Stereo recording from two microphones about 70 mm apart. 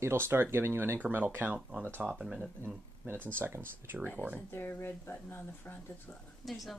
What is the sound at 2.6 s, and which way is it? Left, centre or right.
Speech, right.